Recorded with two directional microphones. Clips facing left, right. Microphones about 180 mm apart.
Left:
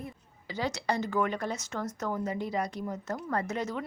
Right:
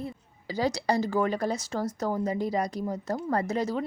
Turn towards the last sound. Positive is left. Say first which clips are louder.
# right 4 dB
turn(degrees=-35)  # may be behind; listen again after turning